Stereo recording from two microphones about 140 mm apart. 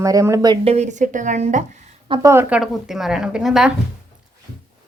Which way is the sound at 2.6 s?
Centre (ahead or behind).